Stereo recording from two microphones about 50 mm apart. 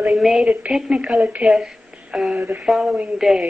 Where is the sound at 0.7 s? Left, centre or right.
Centre.